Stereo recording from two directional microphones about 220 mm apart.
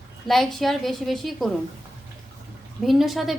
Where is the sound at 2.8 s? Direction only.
Centre (ahead or behind).